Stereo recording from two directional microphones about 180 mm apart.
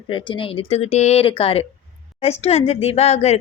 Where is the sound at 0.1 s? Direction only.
30° left (ahead or behind).